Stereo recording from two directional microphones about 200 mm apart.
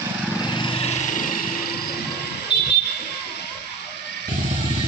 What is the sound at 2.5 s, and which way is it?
Vehicle, 55° left (ahead or behind).